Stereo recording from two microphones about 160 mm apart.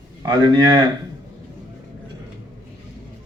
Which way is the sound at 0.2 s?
30° right (ahead or behind).